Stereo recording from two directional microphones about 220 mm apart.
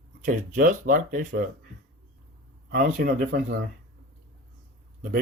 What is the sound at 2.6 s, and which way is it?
Speech, 45° right (ahead or behind).